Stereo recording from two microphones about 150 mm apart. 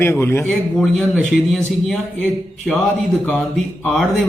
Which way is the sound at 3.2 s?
5° left (ahead or behind).